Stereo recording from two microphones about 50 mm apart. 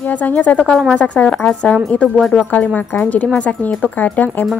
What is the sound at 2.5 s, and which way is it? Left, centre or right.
Speech, left.